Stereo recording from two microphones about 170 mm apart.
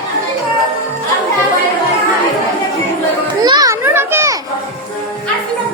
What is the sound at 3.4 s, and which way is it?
Children playing, 25° right (ahead or behind).